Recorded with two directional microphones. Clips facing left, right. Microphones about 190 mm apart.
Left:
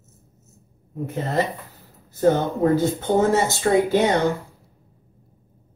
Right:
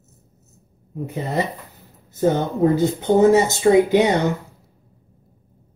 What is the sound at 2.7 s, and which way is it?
Speech, 15° right (ahead or behind).